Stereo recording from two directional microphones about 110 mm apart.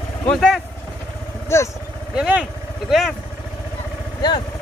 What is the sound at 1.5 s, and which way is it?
Speech, 25° left (ahead or behind).